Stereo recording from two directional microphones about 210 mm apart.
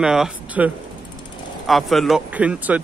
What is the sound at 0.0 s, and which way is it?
Speech, 5° right (ahead or behind).